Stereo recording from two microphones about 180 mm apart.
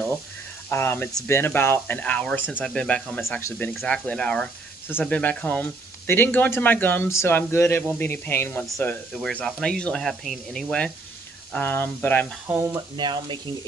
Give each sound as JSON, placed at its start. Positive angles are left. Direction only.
{"t": 0.7, "sound": "speech", "side_deg": 15}
{"t": 12.4, "sound": "speech", "side_deg": -15}
{"t": 12.9, "sound": "speech", "side_deg": -25}